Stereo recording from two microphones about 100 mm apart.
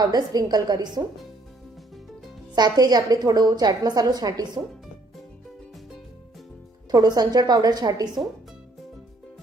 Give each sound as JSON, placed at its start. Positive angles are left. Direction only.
{"t": 0.0, "sound": "a woman's voice", "side_deg": -40}
{"t": 2.6, "sound": "a woman's voice", "side_deg": -45}
{"t": 6.9, "sound": "a woman's voice", "side_deg": -40}